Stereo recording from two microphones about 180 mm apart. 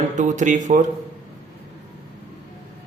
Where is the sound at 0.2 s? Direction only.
45° right (ahead or behind).